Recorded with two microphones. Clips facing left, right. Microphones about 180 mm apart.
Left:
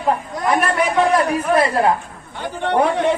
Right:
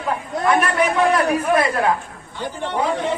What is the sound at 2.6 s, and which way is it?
Speech, 65° left (ahead or behind).